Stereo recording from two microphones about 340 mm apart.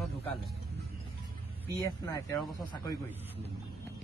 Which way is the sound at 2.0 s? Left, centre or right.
Centre.